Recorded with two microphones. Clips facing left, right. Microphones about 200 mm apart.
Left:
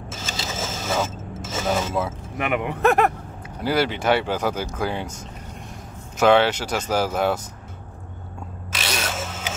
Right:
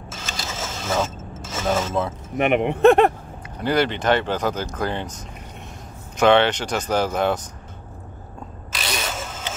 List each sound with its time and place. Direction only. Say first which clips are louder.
0.4 s vehicle: left 2 dB; 5° left (ahead or behind)
1.7 s speech: right 2 dB; 5° left (ahead or behind)
2.3 s speech: right 6 dB; 25° right (ahead or behind)
3.6 s speech: right 1 dB; 5° left (ahead or behind)
6.1 s speech: right 1 dB; 5° left (ahead or behind)
8.7 s ratchet: left 1 dB; centre (ahead or behind)